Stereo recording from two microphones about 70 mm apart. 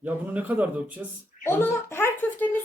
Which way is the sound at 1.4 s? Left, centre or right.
Left.